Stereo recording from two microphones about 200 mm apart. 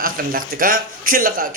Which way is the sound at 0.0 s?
45° right (ahead or behind).